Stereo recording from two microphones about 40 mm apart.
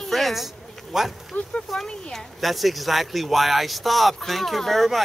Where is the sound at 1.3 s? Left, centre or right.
Left.